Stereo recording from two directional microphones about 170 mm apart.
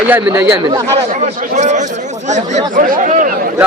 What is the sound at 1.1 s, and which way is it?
Speech, 45° right (ahead or behind).